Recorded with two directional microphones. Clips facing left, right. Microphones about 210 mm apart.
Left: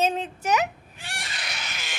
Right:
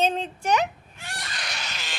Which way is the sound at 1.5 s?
15° left (ahead or behind).